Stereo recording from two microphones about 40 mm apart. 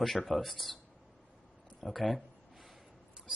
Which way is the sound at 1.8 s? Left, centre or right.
Centre.